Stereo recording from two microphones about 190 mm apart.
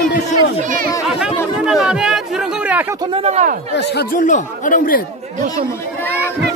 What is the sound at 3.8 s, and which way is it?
Speech, 60° left (ahead or behind).